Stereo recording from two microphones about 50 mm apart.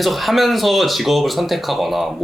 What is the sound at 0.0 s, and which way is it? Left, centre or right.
Speech, centre.